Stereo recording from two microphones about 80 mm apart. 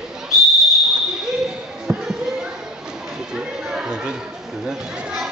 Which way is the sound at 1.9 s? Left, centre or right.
Right.